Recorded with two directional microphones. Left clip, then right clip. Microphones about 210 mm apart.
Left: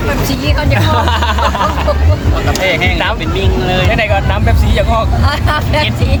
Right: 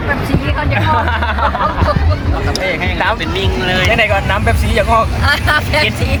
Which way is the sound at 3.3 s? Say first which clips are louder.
Left 1 dB; 5° right (ahead or behind).